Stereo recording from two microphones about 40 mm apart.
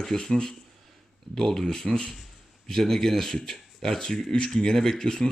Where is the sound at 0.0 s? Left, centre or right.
Centre.